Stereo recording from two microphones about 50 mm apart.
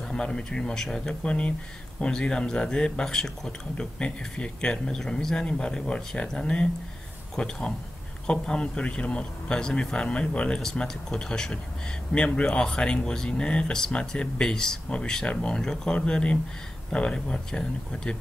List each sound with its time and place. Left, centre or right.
0.1 s a man's voice: centre